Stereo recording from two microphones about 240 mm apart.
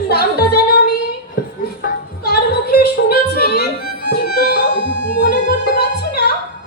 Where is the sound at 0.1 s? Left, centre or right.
Left.